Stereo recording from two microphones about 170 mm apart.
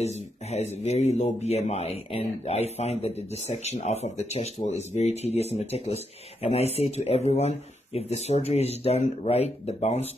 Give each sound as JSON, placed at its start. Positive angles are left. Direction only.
{"t": 0.0, "sound": "speech", "side_deg": 40}